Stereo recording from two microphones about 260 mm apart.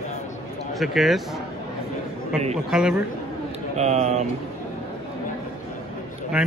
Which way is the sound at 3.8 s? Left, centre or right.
Right.